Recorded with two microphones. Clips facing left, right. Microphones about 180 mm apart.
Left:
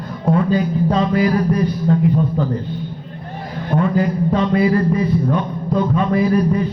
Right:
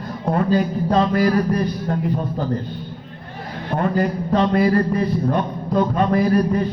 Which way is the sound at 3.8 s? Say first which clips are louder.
Left 2 dB; 50° right (ahead or behind).